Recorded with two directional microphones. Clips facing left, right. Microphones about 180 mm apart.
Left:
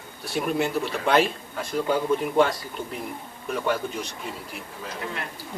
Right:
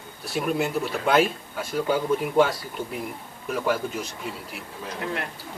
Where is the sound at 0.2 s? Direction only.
Centre (ahead or behind).